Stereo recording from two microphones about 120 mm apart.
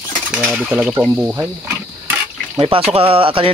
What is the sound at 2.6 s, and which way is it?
Speech, 50° right (ahead or behind).